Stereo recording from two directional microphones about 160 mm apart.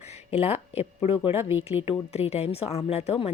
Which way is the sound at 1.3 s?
15° right (ahead or behind).